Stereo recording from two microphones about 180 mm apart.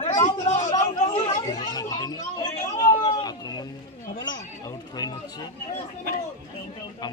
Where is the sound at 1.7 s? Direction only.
20° left (ahead or behind).